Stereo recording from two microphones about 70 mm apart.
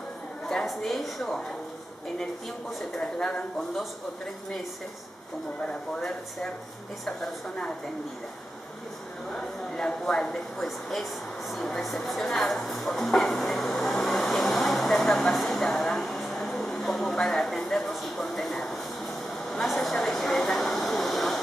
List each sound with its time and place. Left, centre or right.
0.5 s a woman's voice: centre
2.8 s speech: centre
5.9 s speech: centre
9.3 s speech: centre
11.5 s a sound: centre
19.5 s speech: centre